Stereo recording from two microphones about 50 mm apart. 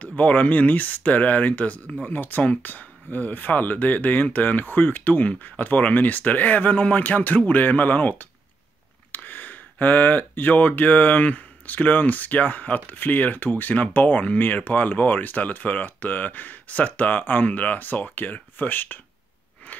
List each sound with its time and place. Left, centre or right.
0.0 s speech: left